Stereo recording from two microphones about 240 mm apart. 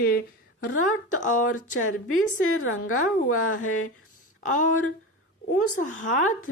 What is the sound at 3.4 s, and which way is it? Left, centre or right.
Speech, left.